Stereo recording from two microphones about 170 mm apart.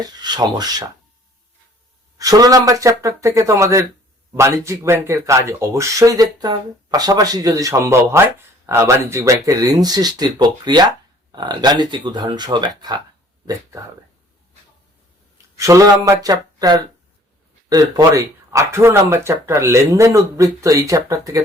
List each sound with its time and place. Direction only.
0.0 s speech: 25° right (ahead or behind)
2.1 s speech: 20° right (ahead or behind)
15.5 s speech: 20° right (ahead or behind)